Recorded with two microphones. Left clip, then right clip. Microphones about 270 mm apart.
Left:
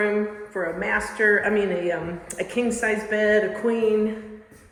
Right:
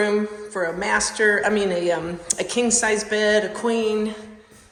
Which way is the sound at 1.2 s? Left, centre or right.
Centre.